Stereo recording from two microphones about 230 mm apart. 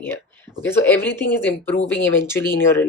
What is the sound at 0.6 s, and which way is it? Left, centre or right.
Speech, centre.